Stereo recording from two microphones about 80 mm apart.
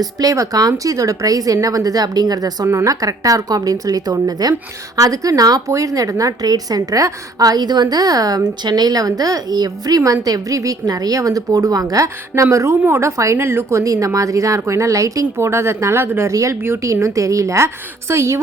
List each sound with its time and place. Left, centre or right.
0.0 s a woman's voice: right
2.6 s a woman's voice: right